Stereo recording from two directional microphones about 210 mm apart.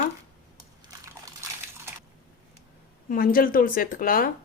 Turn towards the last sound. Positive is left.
turn(degrees=45)  # may be behind; listen again after turning